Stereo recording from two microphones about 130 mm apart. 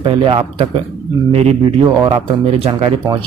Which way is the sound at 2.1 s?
45° right (ahead or behind).